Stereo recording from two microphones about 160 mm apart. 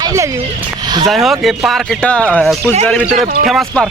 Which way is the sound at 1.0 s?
Centre (ahead or behind).